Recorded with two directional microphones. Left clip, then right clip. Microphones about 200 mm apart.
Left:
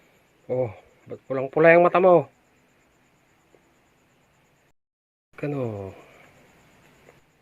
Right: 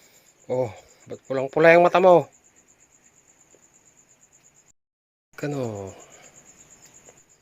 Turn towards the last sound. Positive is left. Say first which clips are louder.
# even
turn(degrees=-20)  # may be behind; listen again after turning